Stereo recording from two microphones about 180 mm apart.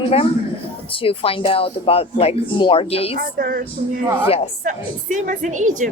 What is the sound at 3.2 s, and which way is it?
Speech, 55° right (ahead or behind).